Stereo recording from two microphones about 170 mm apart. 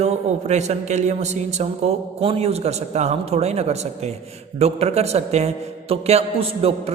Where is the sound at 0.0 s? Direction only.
40° right (ahead or behind).